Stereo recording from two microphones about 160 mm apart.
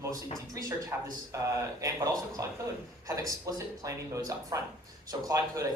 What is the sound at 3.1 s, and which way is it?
Speech, 20° right (ahead or behind).